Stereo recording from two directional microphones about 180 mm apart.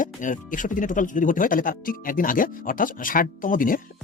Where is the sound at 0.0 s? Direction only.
45° left (ahead or behind).